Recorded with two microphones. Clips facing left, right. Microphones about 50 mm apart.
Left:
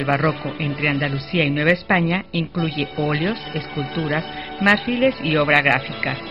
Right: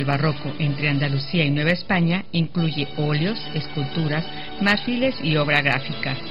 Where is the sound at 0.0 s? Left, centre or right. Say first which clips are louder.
Left 3 dB; left.